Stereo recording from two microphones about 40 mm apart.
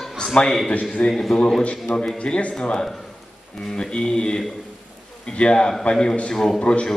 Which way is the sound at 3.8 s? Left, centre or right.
Left.